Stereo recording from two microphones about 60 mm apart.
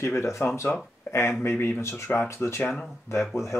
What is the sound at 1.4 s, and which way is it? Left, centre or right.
Speech, left.